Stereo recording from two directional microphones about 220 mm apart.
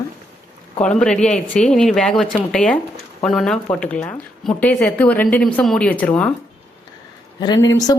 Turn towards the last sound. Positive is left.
turn(degrees=15)  # may be behind; listen again after turning